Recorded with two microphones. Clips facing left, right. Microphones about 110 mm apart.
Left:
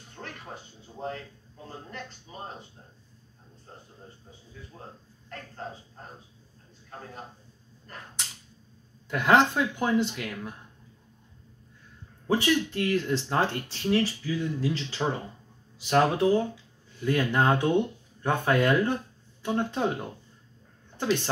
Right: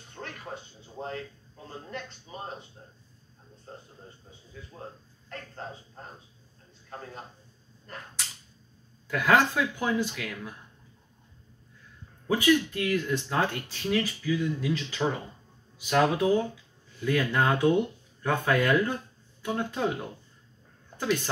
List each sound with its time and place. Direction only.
9.1 s speech: 25° left (ahead or behind)
12.3 s speech: 30° left (ahead or behind)
21.0 s speech: 30° left (ahead or behind)